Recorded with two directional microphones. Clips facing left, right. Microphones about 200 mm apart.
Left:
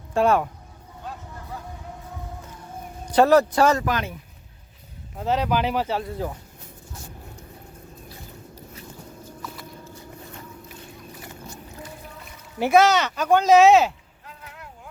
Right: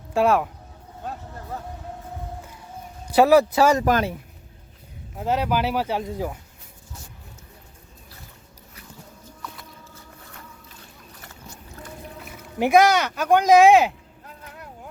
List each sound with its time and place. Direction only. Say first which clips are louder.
0.1 s speech: even; centre (ahead or behind)
3.1 s speech: right 1 dB; 10° right (ahead or behind)
3.8 s speech: right 5 dB; 45° right (ahead or behind)
5.1 s speech: even; 10° right (ahead or behind)
12.5 s speech: right 1 dB; 15° right (ahead or behind)